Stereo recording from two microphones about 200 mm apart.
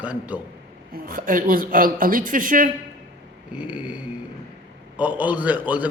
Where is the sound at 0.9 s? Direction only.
45° right (ahead or behind).